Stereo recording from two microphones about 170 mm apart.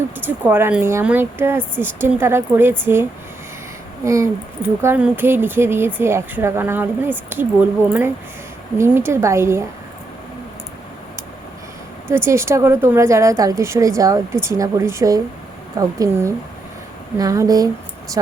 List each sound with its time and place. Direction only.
0.3 s speech: 10° right (ahead or behind)
12.0 s speech: 15° right (ahead or behind)